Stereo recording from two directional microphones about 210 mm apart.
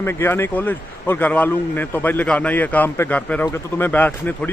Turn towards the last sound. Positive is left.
turn(degrees=10)  # may be behind; listen again after turning